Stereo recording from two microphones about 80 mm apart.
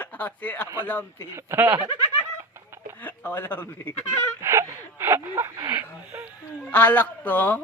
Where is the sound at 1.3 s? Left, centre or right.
Right.